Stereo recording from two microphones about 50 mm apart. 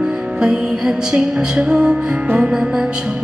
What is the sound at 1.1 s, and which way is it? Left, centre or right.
Music, centre.